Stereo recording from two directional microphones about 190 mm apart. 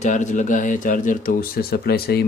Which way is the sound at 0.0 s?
40° left (ahead or behind).